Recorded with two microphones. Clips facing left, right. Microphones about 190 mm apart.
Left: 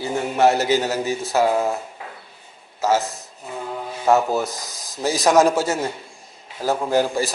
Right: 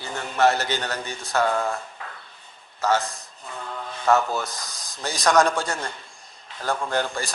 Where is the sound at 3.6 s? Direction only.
15° left (ahead or behind).